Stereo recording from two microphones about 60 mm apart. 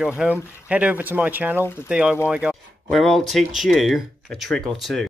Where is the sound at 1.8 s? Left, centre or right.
Centre.